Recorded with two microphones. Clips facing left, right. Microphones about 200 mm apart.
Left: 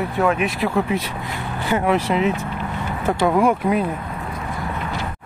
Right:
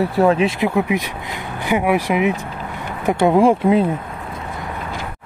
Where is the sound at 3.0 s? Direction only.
25° right (ahead or behind).